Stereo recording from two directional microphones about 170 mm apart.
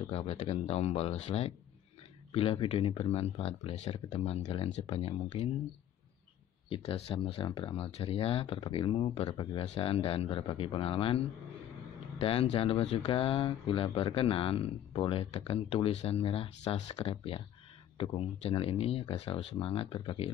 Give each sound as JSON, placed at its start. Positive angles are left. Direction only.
{"t": 0.1, "sound": "speech", "side_deg": 35}
{"t": 6.7, "sound": "speech", "side_deg": 35}